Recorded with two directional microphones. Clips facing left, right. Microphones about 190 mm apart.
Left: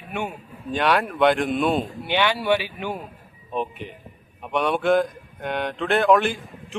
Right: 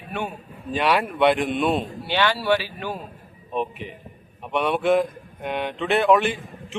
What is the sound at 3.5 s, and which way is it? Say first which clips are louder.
A man's voice: right 1 dB; centre (ahead or behind).